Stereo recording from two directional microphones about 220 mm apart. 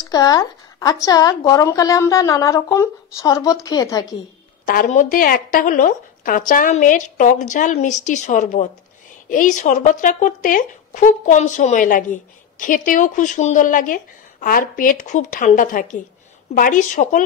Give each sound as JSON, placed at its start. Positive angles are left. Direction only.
{"t": 0.0, "sound": "speech", "side_deg": 15}
{"t": 4.6, "sound": "speech", "side_deg": 35}